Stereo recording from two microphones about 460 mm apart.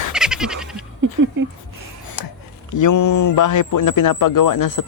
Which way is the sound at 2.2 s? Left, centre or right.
Left.